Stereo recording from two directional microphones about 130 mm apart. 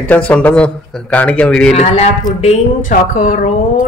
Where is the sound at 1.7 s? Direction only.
55° left (ahead or behind).